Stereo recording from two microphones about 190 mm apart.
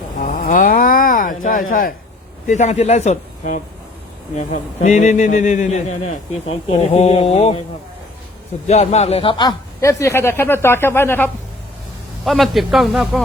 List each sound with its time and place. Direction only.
0.2 s a sound: 40° left (ahead or behind)
2.5 s a man's voice: 35° left (ahead or behind)
8.6 s a man's voice: 35° left (ahead or behind); by 11.3 s 10° left (ahead or behind)
12.2 s a man's voice: centre (ahead or behind)